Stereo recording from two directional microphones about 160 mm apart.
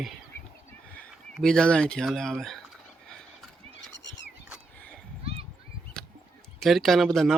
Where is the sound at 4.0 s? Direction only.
90° left.